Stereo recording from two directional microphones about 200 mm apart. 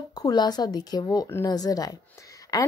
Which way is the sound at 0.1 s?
20° left (ahead or behind).